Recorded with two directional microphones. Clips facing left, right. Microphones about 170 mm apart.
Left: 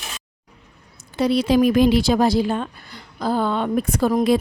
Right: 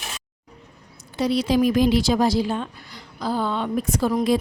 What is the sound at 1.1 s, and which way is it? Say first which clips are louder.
A woman's voice: left 3 dB; 55° left (ahead or behind).